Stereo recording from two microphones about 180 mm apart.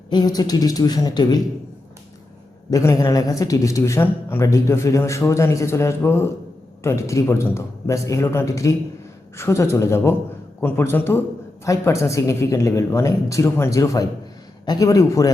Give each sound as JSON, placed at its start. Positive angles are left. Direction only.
{"t": 0.1, "sound": "speech", "side_deg": 25}
{"t": 2.6, "sound": "speech", "side_deg": 20}